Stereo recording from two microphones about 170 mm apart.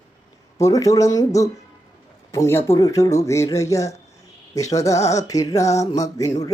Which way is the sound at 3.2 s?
20° left (ahead or behind).